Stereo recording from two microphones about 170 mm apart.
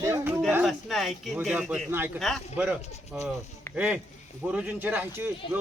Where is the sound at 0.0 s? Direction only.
15° right (ahead or behind).